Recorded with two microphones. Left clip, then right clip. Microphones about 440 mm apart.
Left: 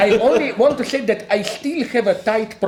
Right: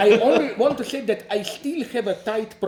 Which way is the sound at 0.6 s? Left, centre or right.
Centre.